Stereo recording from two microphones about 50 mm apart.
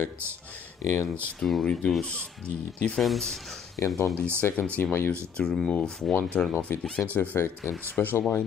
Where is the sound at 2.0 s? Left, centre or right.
Left.